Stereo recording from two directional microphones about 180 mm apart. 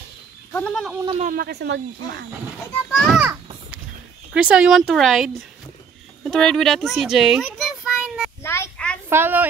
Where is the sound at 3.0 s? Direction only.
Centre (ahead or behind).